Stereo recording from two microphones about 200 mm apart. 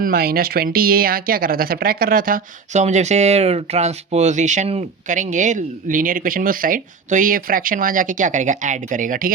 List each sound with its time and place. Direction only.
0.0 s speech: 50° right (ahead or behind)